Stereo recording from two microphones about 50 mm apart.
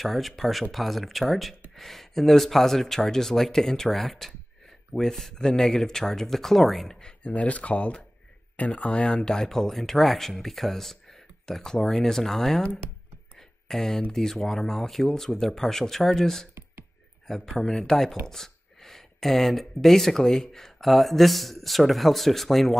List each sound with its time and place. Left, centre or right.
0.0 s speech: centre
7.0 s speech: left
13.4 s a sound: centre
14.1 s speech: centre
17.6 s speech: centre
18.2 s a sound: centre
19.8 s speech: centre